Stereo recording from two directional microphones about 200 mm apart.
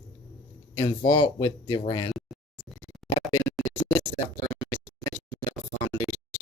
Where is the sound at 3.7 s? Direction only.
15° left (ahead or behind).